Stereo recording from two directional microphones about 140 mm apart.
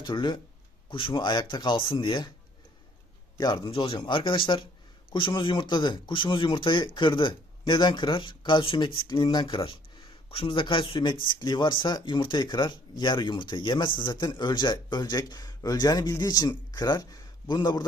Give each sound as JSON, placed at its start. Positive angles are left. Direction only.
{"t": 0.0, "sound": "speech", "side_deg": 35}
{"t": 3.3, "sound": "a man's voice", "side_deg": 30}